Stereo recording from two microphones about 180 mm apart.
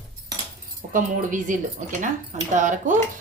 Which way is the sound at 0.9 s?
45° right (ahead or behind).